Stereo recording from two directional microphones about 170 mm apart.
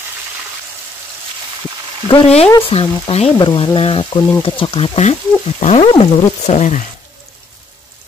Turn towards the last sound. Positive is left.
turn(degrees=45)  # may be behind; listen again after turning